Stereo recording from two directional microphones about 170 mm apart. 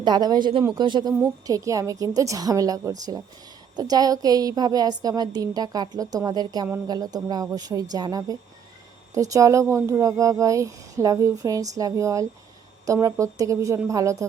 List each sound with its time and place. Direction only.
0.0 s speech: 25° right (ahead or behind)